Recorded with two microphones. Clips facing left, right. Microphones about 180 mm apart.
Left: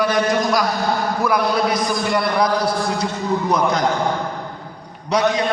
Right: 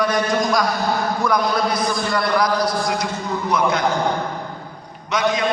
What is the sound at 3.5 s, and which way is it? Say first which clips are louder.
Speech: right 1 dB; 35° left (ahead or behind).